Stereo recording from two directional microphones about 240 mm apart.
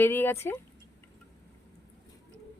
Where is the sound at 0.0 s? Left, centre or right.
Centre.